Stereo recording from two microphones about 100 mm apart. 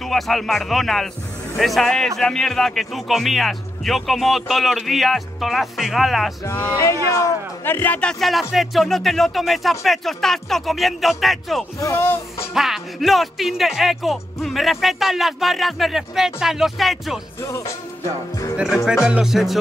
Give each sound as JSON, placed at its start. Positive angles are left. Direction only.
{"t": 0.0, "sound": "speech", "side_deg": 0}
{"t": 6.4, "sound": "speech", "side_deg": 20}
{"t": 6.8, "sound": "speech", "side_deg": 30}
{"t": 11.8, "sound": "speech", "side_deg": 30}
{"t": 12.5, "sound": "speech", "side_deg": -5}
{"t": 17.4, "sound": "music", "side_deg": 30}
{"t": 19.0, "sound": "speech", "side_deg": -5}